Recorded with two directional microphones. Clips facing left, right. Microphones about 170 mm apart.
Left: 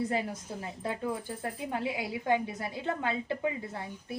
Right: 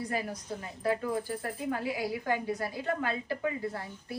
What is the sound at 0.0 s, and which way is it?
Speech, 25° left (ahead or behind).